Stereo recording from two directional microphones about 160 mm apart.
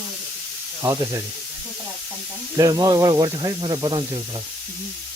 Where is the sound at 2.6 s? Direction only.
20° right (ahead or behind).